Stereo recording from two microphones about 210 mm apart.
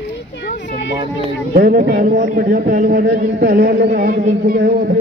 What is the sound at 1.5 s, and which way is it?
A man's voice, 40° right (ahead or behind).